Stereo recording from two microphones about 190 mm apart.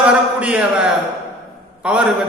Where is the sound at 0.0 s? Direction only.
5° right (ahead or behind).